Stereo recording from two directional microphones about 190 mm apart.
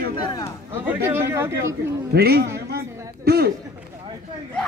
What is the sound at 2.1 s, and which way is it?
Speech, 55° right (ahead or behind).